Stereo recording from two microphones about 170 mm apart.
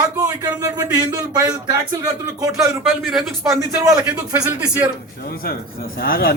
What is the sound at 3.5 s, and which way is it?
A man's voice, 15° right (ahead or behind).